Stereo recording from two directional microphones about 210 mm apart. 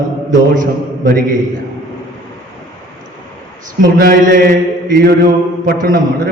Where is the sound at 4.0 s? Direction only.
45° right (ahead or behind).